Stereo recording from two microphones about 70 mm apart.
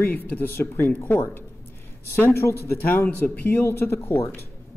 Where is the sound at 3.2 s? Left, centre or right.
Left.